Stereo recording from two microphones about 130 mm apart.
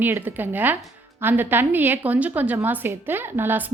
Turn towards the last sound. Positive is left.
turn(degrees=-15)  # may be behind; listen again after turning